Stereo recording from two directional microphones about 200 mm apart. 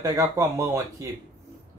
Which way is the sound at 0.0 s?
15° right (ahead or behind).